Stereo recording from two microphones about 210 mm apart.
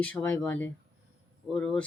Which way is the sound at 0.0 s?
5° left (ahead or behind).